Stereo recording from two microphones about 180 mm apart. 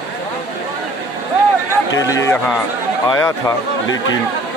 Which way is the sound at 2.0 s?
20° left (ahead or behind).